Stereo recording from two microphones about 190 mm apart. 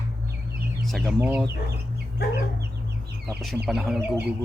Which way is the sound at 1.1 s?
10° right (ahead or behind).